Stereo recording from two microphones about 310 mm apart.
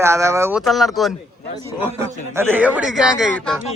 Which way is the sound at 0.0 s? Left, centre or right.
Centre.